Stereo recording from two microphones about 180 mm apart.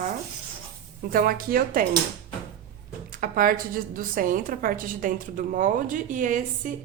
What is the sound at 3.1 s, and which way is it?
A woman's voice, 50° right (ahead or behind).